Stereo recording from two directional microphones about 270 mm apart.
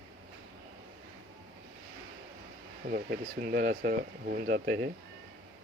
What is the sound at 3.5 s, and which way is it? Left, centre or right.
Speech, right.